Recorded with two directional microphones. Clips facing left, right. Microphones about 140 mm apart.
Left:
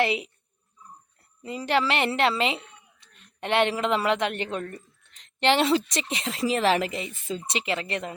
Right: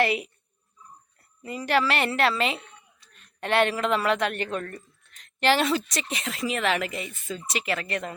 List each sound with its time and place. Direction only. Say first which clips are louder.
0.0 s speech: even; 20° left (ahead or behind)
1.5 s speech: even; 20° left (ahead or behind)